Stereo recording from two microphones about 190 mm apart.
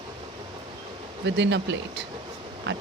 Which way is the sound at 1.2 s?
65° right (ahead or behind).